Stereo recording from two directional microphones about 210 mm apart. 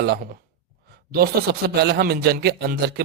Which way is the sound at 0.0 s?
50° right (ahead or behind).